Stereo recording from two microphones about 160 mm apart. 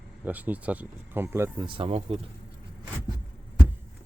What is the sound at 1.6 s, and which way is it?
Speech, 30° right (ahead or behind).